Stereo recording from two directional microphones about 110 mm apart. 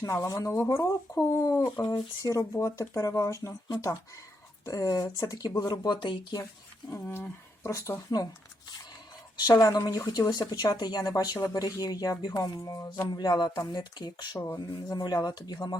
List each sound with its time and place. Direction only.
0.0 s speech: 30° left (ahead or behind)
0.5 s speech: 20° left (ahead or behind); by 6.4 s 45° left (ahead or behind)
7.0 s speech: 20° left (ahead or behind)
9.4 s speech: 35° left (ahead or behind)